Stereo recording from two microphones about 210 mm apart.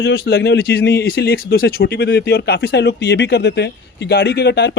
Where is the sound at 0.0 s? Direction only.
50° left (ahead or behind).